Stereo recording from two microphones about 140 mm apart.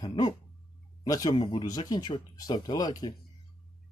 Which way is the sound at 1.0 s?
25° left (ahead or behind).